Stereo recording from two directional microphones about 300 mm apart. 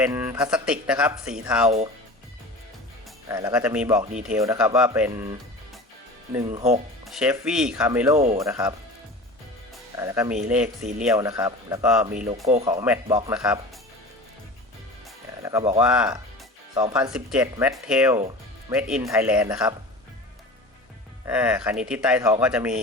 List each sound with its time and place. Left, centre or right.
0.0 s speech: centre
3.2 s speech: centre
6.5 s speech: right
7.0 s speech: centre
10.0 s speech: centre
12.5 s speech: centre
15.4 s speech: centre
15.8 s speech: centre
21.2 s speech: centre